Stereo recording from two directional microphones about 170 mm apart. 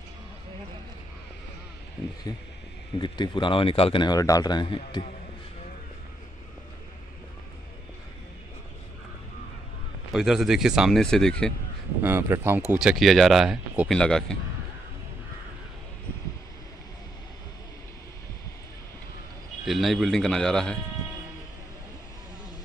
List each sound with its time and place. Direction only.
2.3 s speech: 20° left (ahead or behind)
10.1 s speech: centre (ahead or behind)
12.0 s speech: 15° right (ahead or behind)
12.7 s speech: centre (ahead or behind)
19.6 s speech: centre (ahead or behind)